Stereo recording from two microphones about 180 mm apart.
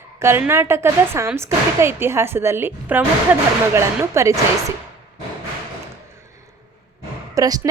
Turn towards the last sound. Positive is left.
turn(degrees=-20)  # may be behind; listen again after turning